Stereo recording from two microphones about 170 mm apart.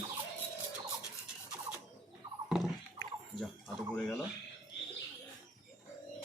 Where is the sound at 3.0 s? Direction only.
25° left (ahead or behind).